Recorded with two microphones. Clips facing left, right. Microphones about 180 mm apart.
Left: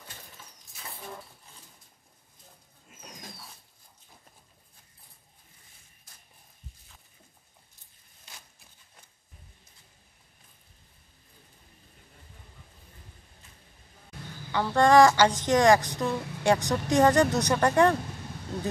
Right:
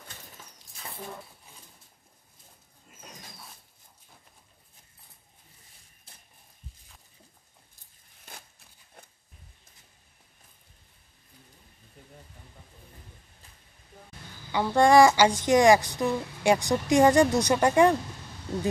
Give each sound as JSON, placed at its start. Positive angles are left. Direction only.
{"t": 3.0, "sound": "dog", "side_deg": 0}
{"t": 8.3, "sound": "a sound", "side_deg": -50}
{"t": 14.5, "sound": "speech", "side_deg": -15}